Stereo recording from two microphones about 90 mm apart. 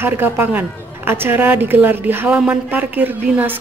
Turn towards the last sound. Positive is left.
turn(degrees=-20)  # may be behind; listen again after turning